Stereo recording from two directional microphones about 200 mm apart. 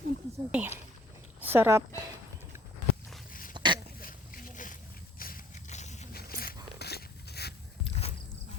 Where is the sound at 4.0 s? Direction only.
45° left (ahead or behind).